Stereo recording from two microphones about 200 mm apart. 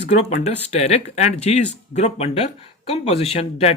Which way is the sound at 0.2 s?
35° left (ahead or behind).